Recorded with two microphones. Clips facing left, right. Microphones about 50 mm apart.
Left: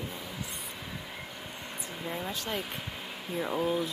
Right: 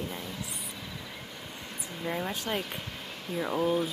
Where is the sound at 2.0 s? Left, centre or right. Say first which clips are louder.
Right 4 dB; centre.